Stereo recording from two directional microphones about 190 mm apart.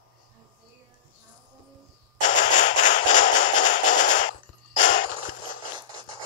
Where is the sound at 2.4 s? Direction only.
40° left (ahead or behind).